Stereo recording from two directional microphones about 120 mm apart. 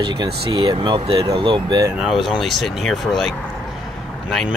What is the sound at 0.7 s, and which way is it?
Speech, 50° right (ahead or behind).